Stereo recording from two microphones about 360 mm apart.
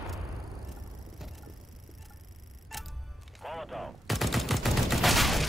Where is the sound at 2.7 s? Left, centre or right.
Centre.